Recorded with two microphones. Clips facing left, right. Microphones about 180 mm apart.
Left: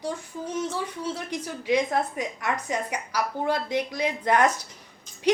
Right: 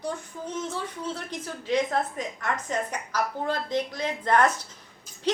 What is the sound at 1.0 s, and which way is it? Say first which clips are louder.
A woman's voice: left 2 dB; 10° left (ahead or behind).